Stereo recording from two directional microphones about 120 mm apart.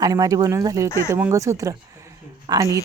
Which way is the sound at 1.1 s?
25° right (ahead or behind).